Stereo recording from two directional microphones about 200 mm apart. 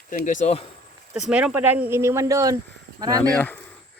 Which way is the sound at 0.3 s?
35° left (ahead or behind).